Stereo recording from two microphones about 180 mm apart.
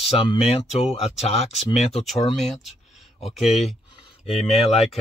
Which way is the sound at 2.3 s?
Centre (ahead or behind).